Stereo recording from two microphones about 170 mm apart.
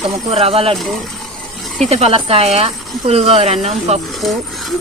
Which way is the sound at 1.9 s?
35° right (ahead or behind).